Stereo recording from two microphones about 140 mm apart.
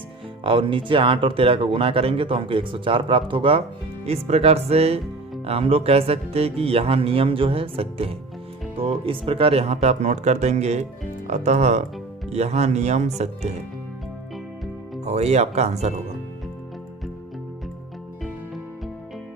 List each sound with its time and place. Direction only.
0.4 s speech: 35° right (ahead or behind)
15.0 s speech: 50° right (ahead or behind)